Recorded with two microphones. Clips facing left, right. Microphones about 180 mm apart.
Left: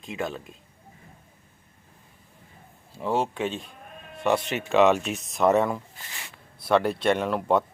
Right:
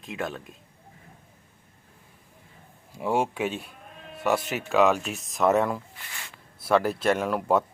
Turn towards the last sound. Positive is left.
turn(degrees=-5)  # may be behind; listen again after turning